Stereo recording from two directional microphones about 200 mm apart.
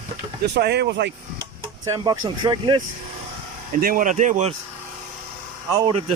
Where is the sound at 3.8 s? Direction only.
45° right (ahead or behind).